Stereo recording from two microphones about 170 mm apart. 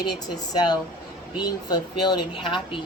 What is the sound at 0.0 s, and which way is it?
Speech, 25° left (ahead or behind).